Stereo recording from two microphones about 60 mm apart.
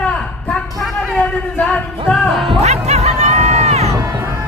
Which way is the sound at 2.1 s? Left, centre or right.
Centre.